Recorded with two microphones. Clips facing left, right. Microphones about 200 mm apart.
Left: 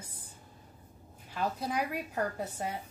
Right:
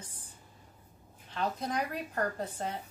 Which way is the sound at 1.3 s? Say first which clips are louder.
Even; 10° left (ahead or behind).